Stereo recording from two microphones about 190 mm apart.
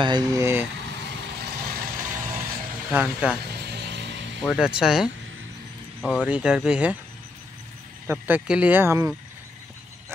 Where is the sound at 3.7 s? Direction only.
65° right (ahead or behind).